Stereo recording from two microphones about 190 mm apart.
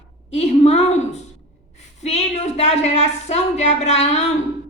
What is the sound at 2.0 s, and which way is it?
A woman's voice, 35° left (ahead or behind).